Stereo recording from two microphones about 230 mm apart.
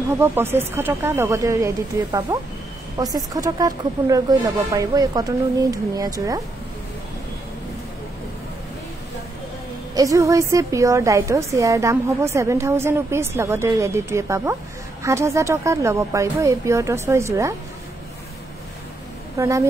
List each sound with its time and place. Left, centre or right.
0.2 s a woman's voice: centre
9.9 s a woman's voice: centre
19.3 s a woman's voice: centre